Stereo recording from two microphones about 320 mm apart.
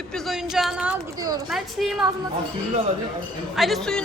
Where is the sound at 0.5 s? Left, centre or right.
Centre.